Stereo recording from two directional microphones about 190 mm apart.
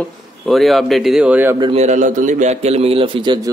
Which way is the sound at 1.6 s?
35° right (ahead or behind).